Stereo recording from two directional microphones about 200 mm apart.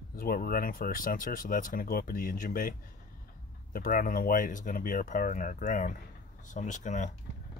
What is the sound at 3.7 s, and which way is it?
Speech, 45° left (ahead or behind).